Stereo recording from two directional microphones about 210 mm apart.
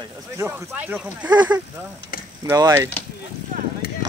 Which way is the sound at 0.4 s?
10° right (ahead or behind).